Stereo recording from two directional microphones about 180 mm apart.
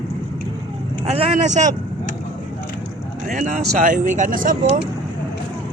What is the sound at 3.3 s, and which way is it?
Speech, 45° right (ahead or behind).